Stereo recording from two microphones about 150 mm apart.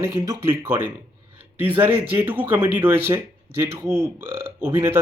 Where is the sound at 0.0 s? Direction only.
20° right (ahead or behind).